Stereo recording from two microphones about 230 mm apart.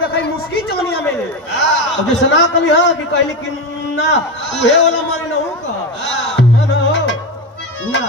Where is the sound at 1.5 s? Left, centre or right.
Left.